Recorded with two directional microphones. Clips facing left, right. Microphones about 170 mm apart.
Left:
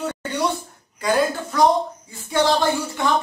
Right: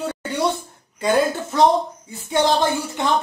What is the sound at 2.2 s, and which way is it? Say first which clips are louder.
Speech: even; 20° right (ahead or behind).